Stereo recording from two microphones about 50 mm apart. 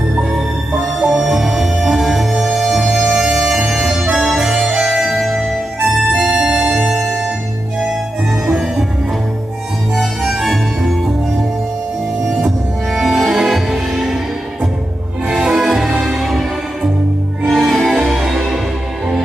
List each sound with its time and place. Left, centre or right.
0.3 s music: centre
2.8 s music: right
3.8 s music: centre
6.2 s organ: centre
6.7 s music: centre
9.9 s music: centre
12.2 s music: centre
15.3 s music: centre